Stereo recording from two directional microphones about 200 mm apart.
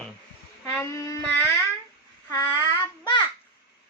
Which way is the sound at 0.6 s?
15° left (ahead or behind).